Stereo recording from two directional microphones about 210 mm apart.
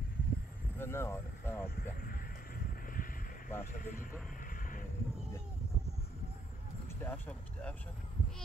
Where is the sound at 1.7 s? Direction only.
45° left (ahead or behind).